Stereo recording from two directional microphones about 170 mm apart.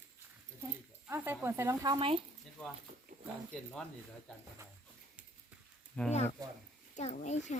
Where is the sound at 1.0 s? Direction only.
10° right (ahead or behind); by 2.2 s 30° right (ahead or behind).